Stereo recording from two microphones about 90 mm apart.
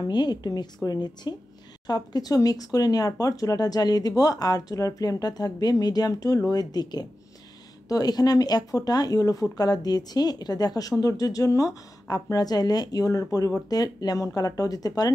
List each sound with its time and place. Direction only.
0.0 s speech: 50° left (ahead or behind)